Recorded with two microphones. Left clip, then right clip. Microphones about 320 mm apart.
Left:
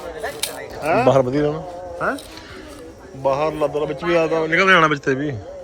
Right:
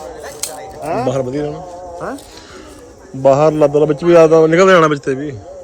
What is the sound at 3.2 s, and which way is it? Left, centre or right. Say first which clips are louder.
A man's voice: right 9 dB; right.